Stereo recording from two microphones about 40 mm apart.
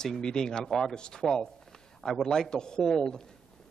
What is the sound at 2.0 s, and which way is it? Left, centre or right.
Speech, centre.